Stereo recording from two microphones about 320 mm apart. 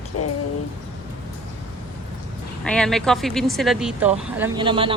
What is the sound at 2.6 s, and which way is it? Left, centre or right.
Speech, centre.